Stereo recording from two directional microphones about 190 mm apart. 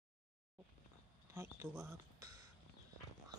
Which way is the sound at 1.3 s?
15° right (ahead or behind).